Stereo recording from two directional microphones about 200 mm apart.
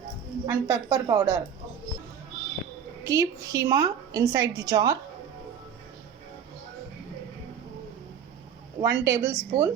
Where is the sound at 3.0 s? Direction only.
15° right (ahead or behind).